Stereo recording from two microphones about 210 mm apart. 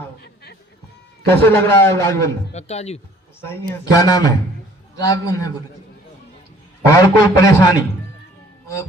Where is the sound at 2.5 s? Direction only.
30° left (ahead or behind).